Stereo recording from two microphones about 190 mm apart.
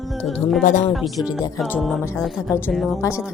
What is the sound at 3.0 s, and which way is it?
Speech, 15° left (ahead or behind).